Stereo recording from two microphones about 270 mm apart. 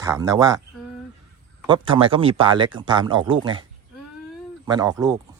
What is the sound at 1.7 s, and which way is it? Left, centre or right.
Speech, centre.